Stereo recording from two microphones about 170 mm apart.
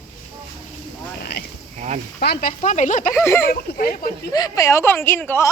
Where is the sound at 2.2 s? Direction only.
70° left (ahead or behind).